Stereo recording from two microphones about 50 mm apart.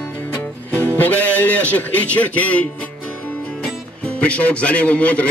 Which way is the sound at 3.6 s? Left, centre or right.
Left.